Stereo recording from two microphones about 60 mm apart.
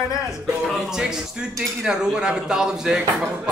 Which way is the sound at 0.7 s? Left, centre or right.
Centre.